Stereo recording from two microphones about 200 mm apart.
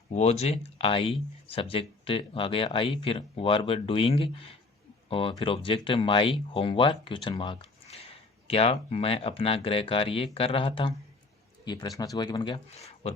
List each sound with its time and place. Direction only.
0.1 s speech: 35° left (ahead or behind)